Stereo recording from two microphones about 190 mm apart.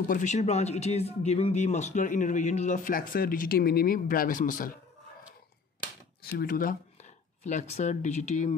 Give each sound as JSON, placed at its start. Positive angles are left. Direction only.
{"t": 0.1, "sound": "speech", "side_deg": 40}
{"t": 6.2, "sound": "speech", "side_deg": 50}